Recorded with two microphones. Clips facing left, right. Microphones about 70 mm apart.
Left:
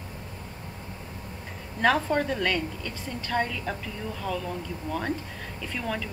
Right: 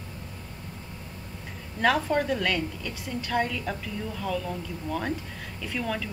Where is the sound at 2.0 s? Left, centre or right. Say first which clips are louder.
Even; centre.